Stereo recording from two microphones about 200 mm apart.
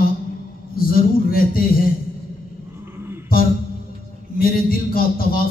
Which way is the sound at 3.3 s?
45° left (ahead or behind).